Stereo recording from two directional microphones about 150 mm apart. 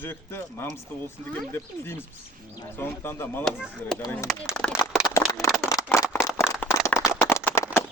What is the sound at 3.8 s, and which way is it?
Speech, 10° left (ahead or behind).